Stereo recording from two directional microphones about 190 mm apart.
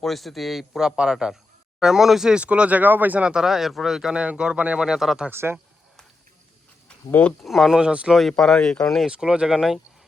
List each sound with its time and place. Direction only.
0.0 s speech: centre (ahead or behind)
6.8 s speech: 5° left (ahead or behind)